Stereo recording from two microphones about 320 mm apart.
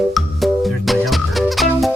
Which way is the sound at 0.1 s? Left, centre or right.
Centre.